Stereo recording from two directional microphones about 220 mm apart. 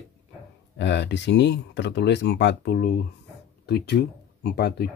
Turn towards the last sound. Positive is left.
turn(degrees=45)  # may be behind; listen again after turning